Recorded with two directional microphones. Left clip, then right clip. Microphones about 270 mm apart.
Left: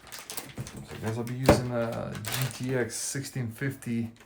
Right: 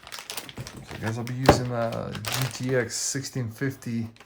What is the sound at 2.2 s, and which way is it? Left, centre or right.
Speech, right.